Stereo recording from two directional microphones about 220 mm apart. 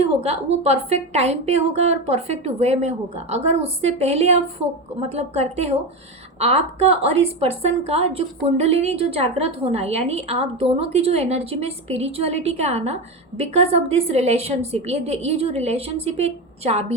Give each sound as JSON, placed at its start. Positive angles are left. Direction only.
{"t": 0.2, "sound": "a woman's voice", "side_deg": -30}